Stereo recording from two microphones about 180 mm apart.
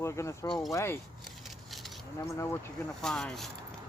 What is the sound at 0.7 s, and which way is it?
Speech, 15° left (ahead or behind).